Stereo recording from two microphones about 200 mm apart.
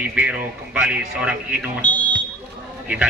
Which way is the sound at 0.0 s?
5° right (ahead or behind).